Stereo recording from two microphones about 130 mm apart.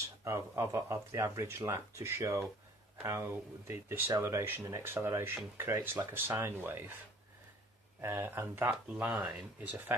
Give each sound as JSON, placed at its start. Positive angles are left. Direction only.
{"t": 0.0, "sound": "speech", "side_deg": -25}
{"t": 8.0, "sound": "speech", "side_deg": -20}